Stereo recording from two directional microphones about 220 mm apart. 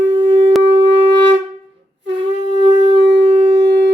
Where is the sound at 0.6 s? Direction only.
50° right (ahead or behind).